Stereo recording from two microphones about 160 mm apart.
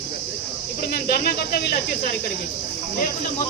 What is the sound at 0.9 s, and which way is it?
Speech, 70° left (ahead or behind).